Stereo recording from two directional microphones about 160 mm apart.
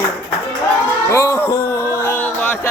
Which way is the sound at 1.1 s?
20° left (ahead or behind).